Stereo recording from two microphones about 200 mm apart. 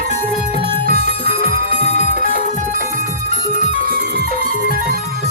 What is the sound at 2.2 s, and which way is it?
Music, 40° left (ahead or behind).